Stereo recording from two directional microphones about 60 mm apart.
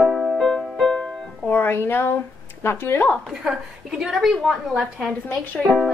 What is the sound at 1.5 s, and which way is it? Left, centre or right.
Speech, left.